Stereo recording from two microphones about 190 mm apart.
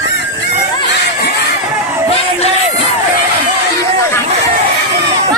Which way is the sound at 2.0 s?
30° left (ahead or behind).